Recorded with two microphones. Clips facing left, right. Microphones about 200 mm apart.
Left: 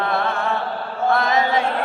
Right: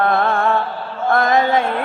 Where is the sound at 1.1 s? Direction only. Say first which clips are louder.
Right 5 dB; 50° right (ahead or behind).